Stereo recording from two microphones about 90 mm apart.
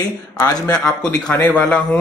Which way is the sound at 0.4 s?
40° left (ahead or behind).